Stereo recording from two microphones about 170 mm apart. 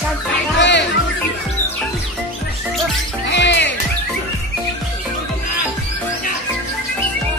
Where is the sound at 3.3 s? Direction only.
90° left.